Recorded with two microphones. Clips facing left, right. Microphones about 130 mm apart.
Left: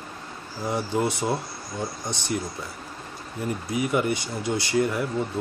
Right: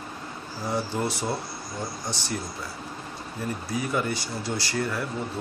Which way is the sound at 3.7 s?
20° left (ahead or behind).